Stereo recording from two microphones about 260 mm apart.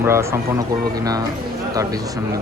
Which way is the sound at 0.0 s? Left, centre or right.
Centre.